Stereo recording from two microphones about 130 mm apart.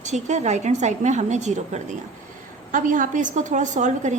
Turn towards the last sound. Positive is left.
turn(degrees=-70)  # may be behind; listen again after turning